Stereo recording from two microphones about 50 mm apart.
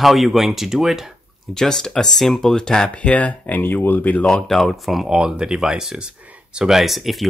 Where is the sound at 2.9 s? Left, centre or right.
Left.